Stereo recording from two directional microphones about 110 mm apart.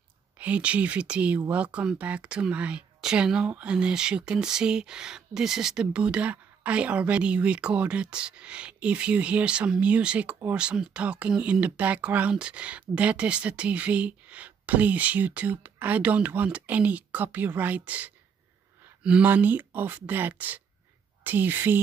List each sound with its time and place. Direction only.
0.4 s speech: 10° right (ahead or behind)